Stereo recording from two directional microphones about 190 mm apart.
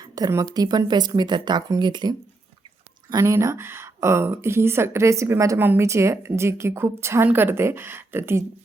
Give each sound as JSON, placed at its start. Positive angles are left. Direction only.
{"t": 0.0, "sound": "a woman's voice", "side_deg": -15}